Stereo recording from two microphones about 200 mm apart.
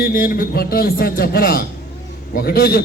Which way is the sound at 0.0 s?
50° left (ahead or behind).